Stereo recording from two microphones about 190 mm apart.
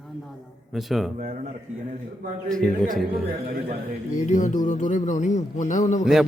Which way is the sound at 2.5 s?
5° left (ahead or behind).